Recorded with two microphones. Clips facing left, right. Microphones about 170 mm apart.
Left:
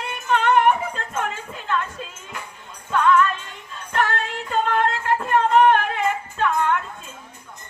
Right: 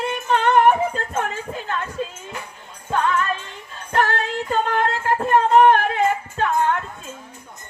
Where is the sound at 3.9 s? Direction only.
35° right (ahead or behind).